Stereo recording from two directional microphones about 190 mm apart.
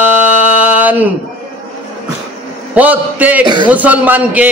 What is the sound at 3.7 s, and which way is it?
Speech, 10° right (ahead or behind).